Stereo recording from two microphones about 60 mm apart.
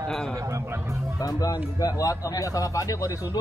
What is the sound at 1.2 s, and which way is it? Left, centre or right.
A man's voice, left.